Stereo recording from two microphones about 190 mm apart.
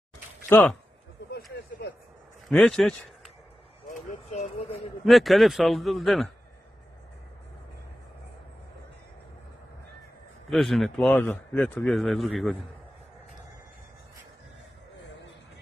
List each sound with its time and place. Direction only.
0.5 s speech: 10° left (ahead or behind)
1.3 s a sound: 60° left (ahead or behind)
2.5 s speech: 5° left (ahead or behind)
3.9 s a sound: 40° left (ahead or behind)
5.0 s speech: centre (ahead or behind)
10.5 s speech: centre (ahead or behind)